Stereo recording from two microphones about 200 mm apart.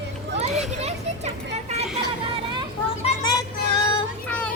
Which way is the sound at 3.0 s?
30° left (ahead or behind).